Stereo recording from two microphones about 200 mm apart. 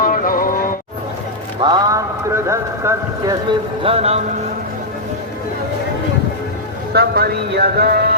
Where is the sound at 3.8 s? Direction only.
30° right (ahead or behind).